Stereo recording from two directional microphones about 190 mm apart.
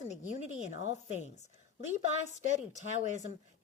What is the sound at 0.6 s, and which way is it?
Speech, 40° right (ahead or behind).